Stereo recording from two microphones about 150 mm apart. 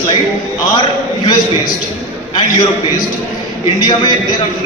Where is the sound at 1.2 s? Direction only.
30° left (ahead or behind).